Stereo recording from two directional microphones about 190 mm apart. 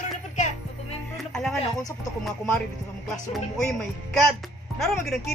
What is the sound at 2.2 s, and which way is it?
Speech, 5° left (ahead or behind).